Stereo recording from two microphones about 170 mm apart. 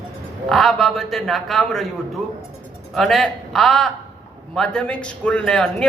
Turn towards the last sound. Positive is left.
turn(degrees=5)  # may be behind; listen again after turning